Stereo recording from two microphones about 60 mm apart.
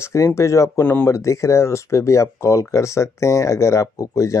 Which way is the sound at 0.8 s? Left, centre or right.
Left.